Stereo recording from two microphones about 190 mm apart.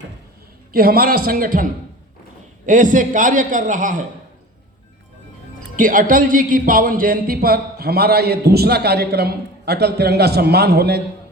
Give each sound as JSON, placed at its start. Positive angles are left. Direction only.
{"t": 0.7, "sound": "a man's voice", "side_deg": -50}
{"t": 5.7, "sound": "speech", "side_deg": -45}